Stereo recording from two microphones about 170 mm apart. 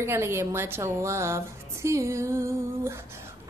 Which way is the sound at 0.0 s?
15° right (ahead or behind).